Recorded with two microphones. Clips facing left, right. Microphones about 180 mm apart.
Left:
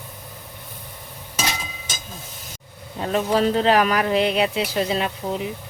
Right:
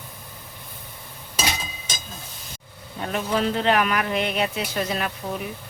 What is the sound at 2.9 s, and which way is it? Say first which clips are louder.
Speech: left 4 dB; 30° left (ahead or behind).